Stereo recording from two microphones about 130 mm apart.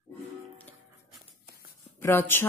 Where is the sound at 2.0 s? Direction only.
20° left (ahead or behind).